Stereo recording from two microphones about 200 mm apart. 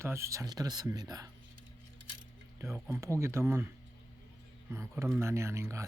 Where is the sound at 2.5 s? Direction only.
15° right (ahead or behind).